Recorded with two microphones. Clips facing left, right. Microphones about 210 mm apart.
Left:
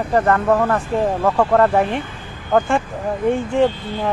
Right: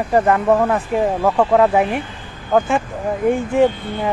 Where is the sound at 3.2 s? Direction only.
10° right (ahead or behind).